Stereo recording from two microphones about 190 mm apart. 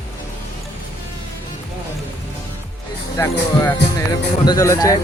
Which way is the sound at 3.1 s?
15° left (ahead or behind).